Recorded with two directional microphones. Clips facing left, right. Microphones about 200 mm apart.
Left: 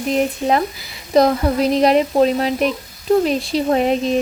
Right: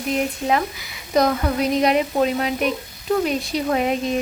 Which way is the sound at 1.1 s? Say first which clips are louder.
Left 4 dB; 30° left (ahead or behind).